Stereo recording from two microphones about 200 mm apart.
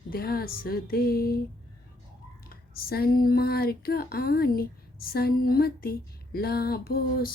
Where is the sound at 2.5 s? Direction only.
50° left (ahead or behind).